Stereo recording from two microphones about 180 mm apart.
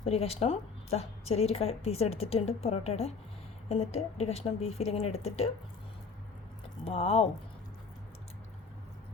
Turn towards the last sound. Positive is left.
turn(degrees=35)  # may be behind; listen again after turning